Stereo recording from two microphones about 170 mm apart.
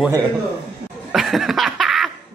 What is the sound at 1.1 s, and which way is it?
Laughter, centre (ahead or behind).